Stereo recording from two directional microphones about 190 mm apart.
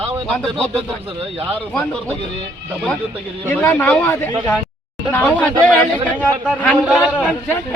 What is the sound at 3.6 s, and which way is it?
Speech, 10° left (ahead or behind).